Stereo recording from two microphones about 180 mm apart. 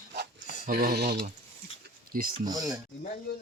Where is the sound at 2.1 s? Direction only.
55° right (ahead or behind).